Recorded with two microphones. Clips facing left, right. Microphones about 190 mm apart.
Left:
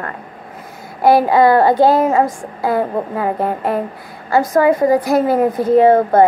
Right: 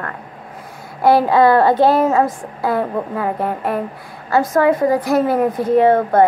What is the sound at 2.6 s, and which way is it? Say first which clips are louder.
A woman's voice: left 2 dB; 20° left (ahead or behind).